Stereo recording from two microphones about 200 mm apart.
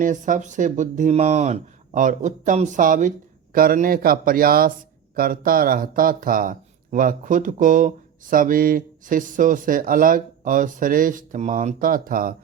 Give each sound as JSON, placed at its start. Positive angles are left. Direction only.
{"t": 0.0, "sound": "speech", "side_deg": -40}